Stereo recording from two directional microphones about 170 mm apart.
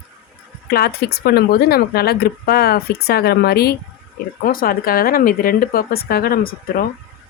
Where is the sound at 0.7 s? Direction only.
65° left (ahead or behind).